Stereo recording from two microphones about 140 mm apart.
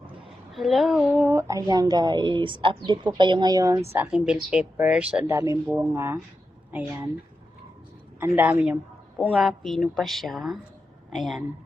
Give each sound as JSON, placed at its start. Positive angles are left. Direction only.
{"t": 0.5, "sound": "speech", "side_deg": 0}
{"t": 1.1, "sound": "speech", "side_deg": -15}
{"t": 3.9, "sound": "speech", "side_deg": -15}
{"t": 5.2, "sound": "speech", "side_deg": -20}
{"t": 5.6, "sound": "speech", "side_deg": -5}
{"t": 5.9, "sound": "speech", "side_deg": -15}
{"t": 8.4, "sound": "speech", "side_deg": -15}
{"t": 9.3, "sound": "speech", "side_deg": 0}